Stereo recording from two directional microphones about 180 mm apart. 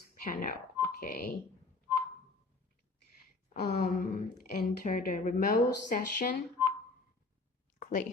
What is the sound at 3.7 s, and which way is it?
Speech, 55° left (ahead or behind).